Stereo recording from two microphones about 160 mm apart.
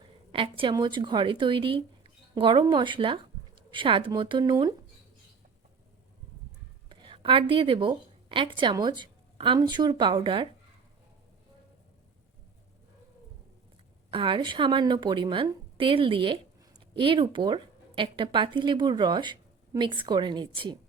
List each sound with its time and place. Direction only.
0.3 s speech: 35° right (ahead or behind)
6.8 s a woman's voice: 30° right (ahead or behind)
14.1 s a woman's voice: 30° right (ahead or behind)